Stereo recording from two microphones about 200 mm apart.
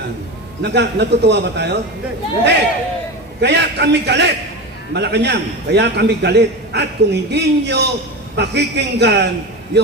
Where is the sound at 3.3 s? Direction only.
55° right (ahead or behind).